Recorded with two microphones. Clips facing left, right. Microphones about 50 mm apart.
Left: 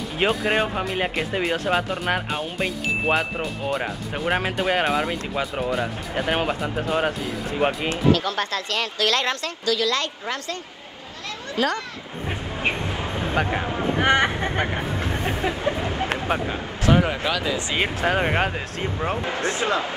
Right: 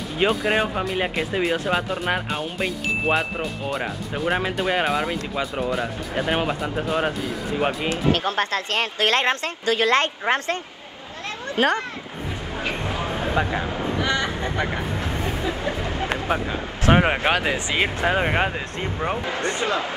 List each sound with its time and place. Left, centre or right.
0.2 s speech: centre
8.1 s speech: right
13.0 s a sound: right
13.4 s a sound: left
13.9 s speech: left
15.2 s a sound: left
16.1 s speech: centre
16.8 s speech: right
17.7 s speech: centre
19.3 s speech: right